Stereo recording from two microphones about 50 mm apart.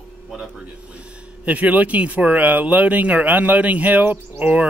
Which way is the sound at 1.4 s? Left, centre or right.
Right.